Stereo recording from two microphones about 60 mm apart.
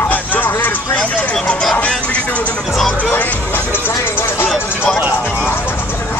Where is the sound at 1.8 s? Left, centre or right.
Centre; by 4.5 s left.